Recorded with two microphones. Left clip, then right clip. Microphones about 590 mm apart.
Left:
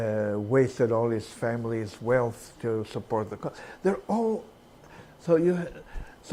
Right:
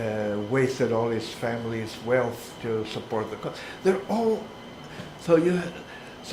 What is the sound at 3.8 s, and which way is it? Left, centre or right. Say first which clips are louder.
Speech: right 3 dB; left.